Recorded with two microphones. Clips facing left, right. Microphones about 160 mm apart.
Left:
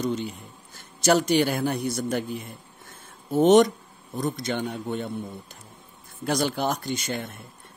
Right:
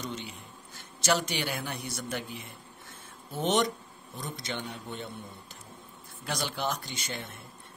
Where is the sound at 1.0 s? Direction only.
45° left (ahead or behind).